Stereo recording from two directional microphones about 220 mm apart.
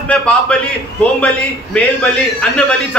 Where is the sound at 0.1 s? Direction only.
5° left (ahead or behind).